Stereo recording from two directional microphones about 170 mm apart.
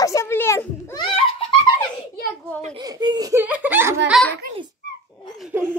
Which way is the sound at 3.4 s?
10° right (ahead or behind).